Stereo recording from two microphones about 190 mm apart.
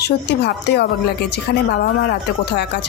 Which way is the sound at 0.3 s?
60° left (ahead or behind).